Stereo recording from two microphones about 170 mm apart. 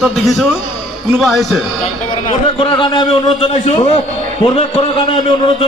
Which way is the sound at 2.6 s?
30° left (ahead or behind).